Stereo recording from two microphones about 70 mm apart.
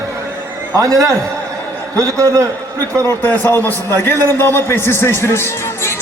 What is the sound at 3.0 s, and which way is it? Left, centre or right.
Speech, left.